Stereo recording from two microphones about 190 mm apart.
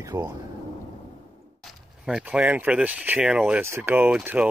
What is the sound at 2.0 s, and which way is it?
Speech, 5° right (ahead or behind).